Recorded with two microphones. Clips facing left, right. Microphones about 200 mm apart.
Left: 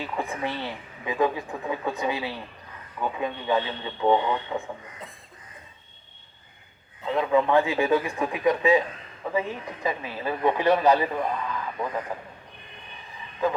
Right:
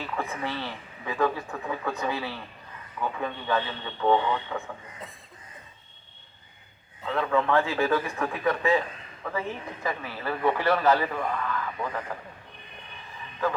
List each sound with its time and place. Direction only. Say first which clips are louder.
0.0 s speech: left 2 dB; 15° left (ahead or behind)
7.1 s speech: left 3 dB; 15° left (ahead or behind)